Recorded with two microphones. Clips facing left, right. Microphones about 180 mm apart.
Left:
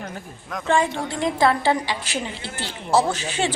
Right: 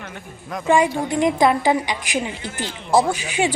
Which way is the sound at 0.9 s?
20° right (ahead or behind).